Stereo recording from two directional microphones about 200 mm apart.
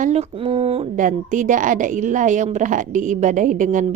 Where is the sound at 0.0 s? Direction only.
35° right (ahead or behind).